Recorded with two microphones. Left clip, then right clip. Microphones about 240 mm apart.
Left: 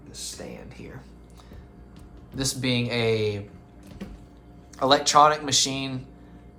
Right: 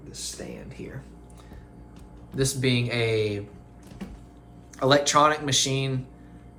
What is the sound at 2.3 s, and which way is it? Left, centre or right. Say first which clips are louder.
Speech: right 1 dB; left.